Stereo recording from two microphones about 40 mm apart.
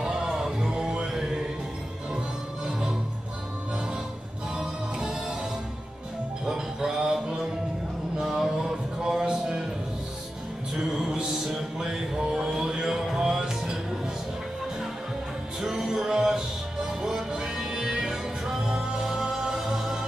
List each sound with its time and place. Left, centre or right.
0.0 s music: centre
4.6 s music: centre
6.4 s music: centre
8.2 s a sound: centre
10.8 s music: centre
15.6 s music: centre